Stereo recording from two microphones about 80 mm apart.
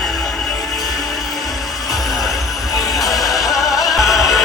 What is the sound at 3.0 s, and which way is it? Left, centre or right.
Music, left.